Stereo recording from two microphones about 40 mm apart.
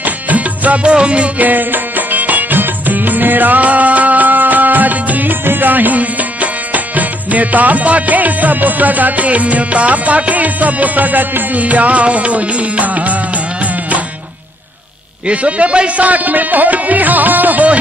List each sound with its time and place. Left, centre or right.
0.0 s music: right
0.8 s music: right
1.4 s music: right
5.4 s music: right
15.2 s a man's voice: right
16.1 s music: right